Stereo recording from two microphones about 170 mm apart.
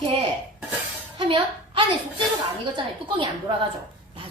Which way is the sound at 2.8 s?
30° right (ahead or behind).